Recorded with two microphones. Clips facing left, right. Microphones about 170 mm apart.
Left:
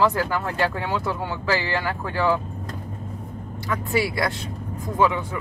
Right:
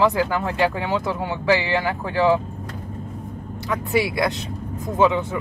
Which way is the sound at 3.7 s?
15° right (ahead or behind).